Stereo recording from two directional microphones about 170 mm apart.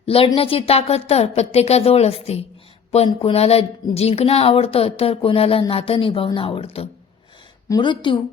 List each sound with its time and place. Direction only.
0.0 s speech: 35° left (ahead or behind)